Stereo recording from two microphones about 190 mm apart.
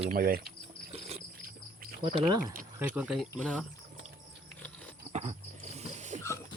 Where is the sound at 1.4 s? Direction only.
50° right (ahead or behind).